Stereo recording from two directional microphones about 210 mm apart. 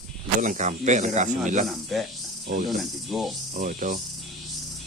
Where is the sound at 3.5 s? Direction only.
40° right (ahead or behind).